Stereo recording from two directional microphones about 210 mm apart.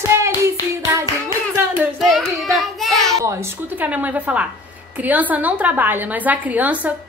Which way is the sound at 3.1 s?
15° right (ahead or behind).